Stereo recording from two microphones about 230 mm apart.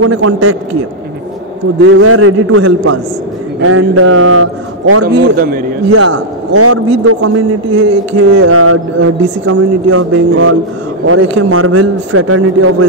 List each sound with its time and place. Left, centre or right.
0.0 s a man's voice: right
1.8 s a man's voice: right
5.0 s a man's voice: right
5.9 s a man's voice: right
8.3 s a man's voice: right
9.2 s a man's voice: right